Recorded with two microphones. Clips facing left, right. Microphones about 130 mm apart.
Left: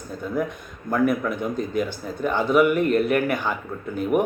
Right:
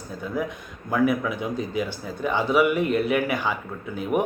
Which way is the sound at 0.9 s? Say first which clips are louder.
Left 1 dB; 5° right (ahead or behind).